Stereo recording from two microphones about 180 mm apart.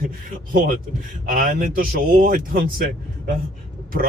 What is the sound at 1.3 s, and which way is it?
Speech, 50° right (ahead or behind).